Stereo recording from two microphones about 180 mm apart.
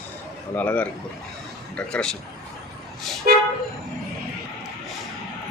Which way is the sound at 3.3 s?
50° right (ahead or behind).